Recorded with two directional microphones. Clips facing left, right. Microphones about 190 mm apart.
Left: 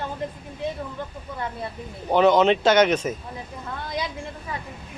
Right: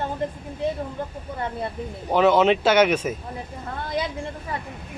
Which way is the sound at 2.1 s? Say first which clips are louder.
Even; 5° right (ahead or behind).